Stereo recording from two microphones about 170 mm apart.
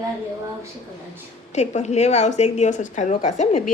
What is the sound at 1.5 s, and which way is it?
A woman's voice, 40° left (ahead or behind).